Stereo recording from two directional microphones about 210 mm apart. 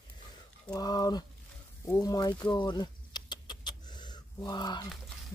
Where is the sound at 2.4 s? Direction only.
20° left (ahead or behind).